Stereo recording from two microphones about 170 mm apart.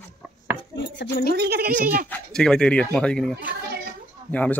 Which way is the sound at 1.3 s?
70° right (ahead or behind).